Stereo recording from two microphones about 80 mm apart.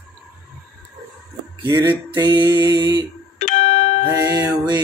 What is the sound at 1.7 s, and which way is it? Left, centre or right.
Music, right.